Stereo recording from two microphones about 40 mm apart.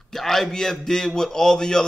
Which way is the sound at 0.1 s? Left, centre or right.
Centre.